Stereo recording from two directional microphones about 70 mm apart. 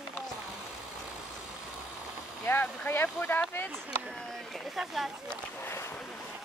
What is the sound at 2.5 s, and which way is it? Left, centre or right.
Speech, left.